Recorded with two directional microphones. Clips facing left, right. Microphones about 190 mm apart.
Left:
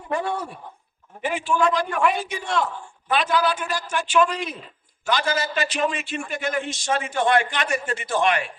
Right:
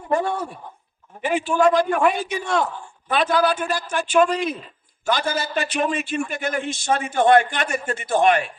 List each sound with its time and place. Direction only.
0.1 s a man's voice: 45° right (ahead or behind)
1.5 s a man's voice: 45° right (ahead or behind)